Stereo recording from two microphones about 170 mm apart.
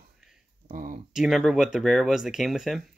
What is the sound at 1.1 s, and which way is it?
Speech, 5° right (ahead or behind).